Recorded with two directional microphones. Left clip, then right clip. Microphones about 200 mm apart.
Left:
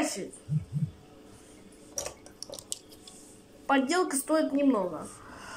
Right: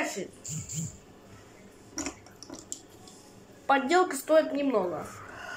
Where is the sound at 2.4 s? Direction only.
55° left (ahead or behind).